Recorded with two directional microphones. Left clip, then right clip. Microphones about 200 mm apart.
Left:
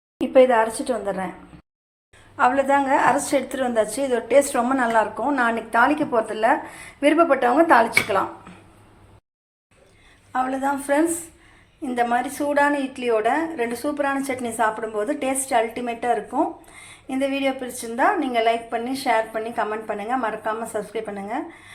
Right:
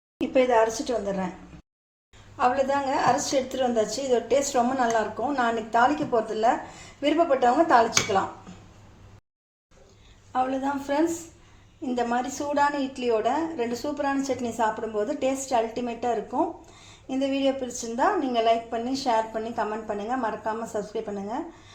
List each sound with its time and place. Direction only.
0.2 s a woman's voice: 5° left (ahead or behind)
2.4 s a woman's voice: 5° left (ahead or behind)
10.3 s a woman's voice: 5° left (ahead or behind)